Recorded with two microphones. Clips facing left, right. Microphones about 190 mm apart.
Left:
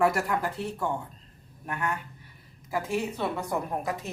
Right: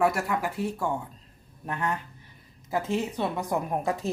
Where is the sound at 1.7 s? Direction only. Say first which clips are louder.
Right 2 dB; 25° right (ahead or behind).